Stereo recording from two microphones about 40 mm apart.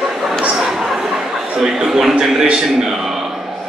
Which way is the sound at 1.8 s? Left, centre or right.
Centre.